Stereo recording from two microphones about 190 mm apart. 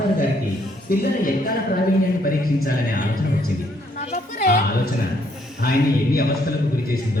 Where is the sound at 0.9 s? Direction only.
50° left (ahead or behind).